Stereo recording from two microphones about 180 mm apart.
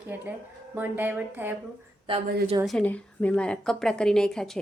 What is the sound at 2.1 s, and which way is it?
Speech, 30° right (ahead or behind).